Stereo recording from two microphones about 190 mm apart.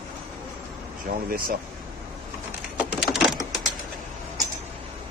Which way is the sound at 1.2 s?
50° right (ahead or behind).